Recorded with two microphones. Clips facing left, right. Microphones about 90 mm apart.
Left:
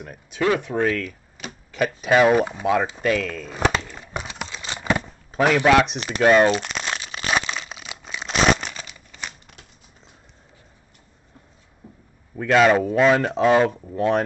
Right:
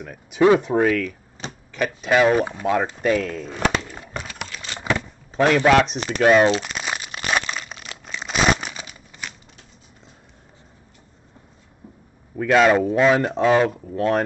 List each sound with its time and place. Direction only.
0.3 s speech: 20° right (ahead or behind)
0.7 s speech: 10° right (ahead or behind)
1.4 s a sound: 35° right (ahead or behind)
1.8 s speech: 5° left (ahead or behind)
3.3 s speech: 25° right (ahead or behind)
4.1 s a sound: 15° left (ahead or behind)
5.7 s speech: 5° left (ahead or behind)
6.6 s crumpling: 5° right (ahead or behind)
12.4 s speech: centre (ahead or behind)